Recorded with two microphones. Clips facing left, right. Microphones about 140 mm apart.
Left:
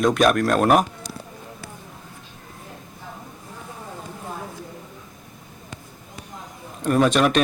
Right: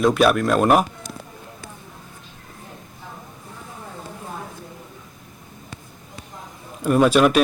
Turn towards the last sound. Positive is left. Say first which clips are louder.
# right 3 dB
turn(degrees=-5)  # may be behind; listen again after turning